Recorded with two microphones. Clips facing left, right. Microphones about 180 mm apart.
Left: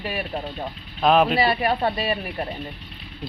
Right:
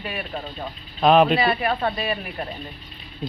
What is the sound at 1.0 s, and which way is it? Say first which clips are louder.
Speech: right 2 dB; centre (ahead or behind).